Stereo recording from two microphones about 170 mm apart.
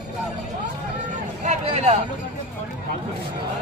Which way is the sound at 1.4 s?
40° right (ahead or behind).